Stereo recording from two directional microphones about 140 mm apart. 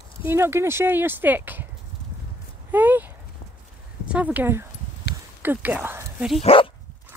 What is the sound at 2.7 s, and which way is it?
Speech, 15° right (ahead or behind).